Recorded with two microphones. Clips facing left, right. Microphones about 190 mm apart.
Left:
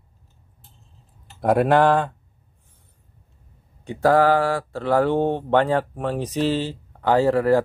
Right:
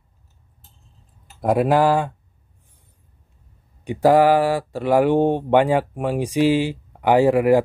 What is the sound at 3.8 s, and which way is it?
Speech, 15° right (ahead or behind).